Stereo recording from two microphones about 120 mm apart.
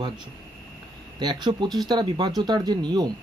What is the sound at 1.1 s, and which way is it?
Speech, 35° right (ahead or behind).